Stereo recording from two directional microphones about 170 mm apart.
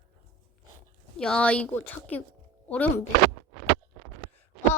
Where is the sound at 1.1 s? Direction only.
5° left (ahead or behind).